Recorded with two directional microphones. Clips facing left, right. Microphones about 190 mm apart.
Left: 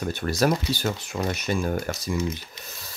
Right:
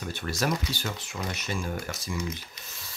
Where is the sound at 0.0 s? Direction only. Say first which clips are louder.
Left 7 dB; 45° left (ahead or behind).